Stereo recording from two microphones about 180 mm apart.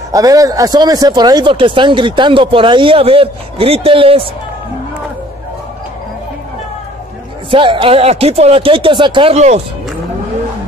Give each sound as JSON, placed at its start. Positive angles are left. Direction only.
{"t": 0.1, "sound": "speech", "side_deg": -20}
{"t": 7.5, "sound": "speech", "side_deg": -30}